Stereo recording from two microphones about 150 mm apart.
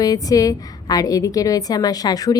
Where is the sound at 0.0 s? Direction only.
25° left (ahead or behind).